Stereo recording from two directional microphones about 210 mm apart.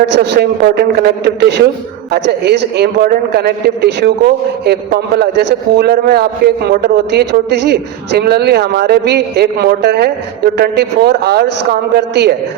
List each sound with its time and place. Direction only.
0.0 s a man's voice: 50° right (ahead or behind)